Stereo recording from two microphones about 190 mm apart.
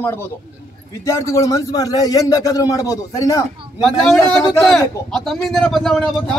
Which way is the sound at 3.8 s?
Centre (ahead or behind).